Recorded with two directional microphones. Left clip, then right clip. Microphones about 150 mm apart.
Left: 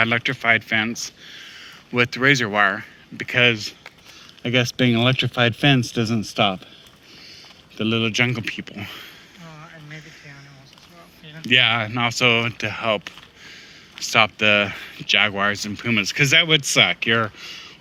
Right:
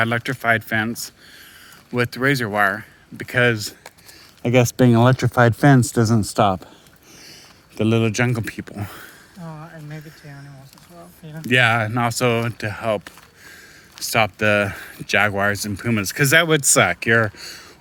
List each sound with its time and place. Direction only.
0.3 s speech: 40° right (ahead or behind)
1.5 s speech: 25° right (ahead or behind)
3.6 s speech: 60° right (ahead or behind)
4.4 s speech: 90° right
7.9 s speech: 90° right
8.2 s speech: 55° right (ahead or behind)
9.4 s a sound: 35° right (ahead or behind)
11.3 s speech: 50° right (ahead or behind)
12.4 s speech: 35° right (ahead or behind)
14.0 s speech: 40° right (ahead or behind)
15.1 s speech: 55° right (ahead or behind)